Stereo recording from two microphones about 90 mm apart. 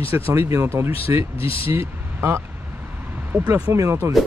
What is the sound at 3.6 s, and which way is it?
Speech, 35° right (ahead or behind).